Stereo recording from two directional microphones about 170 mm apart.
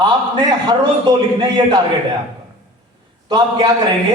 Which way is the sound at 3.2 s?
25° right (ahead or behind).